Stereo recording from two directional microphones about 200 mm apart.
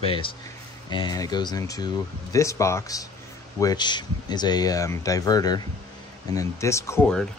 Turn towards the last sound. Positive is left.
turn(degrees=15)  # may be behind; listen again after turning